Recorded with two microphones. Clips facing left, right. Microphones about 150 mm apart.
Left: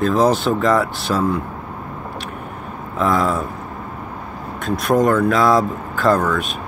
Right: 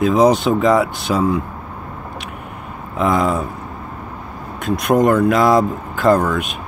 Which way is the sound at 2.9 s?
Centre (ahead or behind).